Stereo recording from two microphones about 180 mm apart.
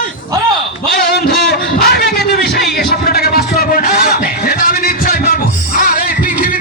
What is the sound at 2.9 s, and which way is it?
Music, 60° left (ahead or behind).